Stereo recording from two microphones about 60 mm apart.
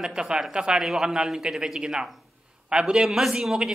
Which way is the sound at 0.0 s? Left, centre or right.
Centre.